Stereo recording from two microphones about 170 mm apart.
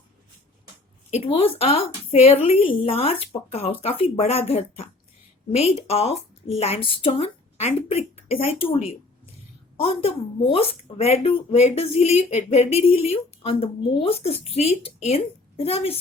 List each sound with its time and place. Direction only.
1.1 s a woman's voice: 35° left (ahead or behind)